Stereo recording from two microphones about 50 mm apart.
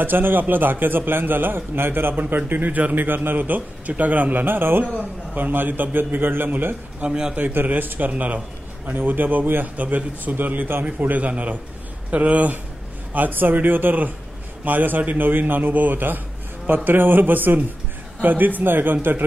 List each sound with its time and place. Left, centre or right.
0.0 s a man's voice: right
7.0 s a man's voice: centre
7.3 s a man's voice: right
10.9 s a man's voice: right